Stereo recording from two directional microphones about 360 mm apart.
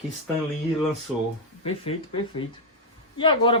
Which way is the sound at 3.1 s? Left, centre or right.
Centre.